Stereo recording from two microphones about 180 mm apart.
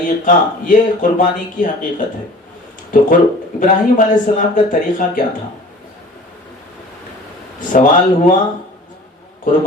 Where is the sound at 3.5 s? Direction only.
45° left (ahead or behind).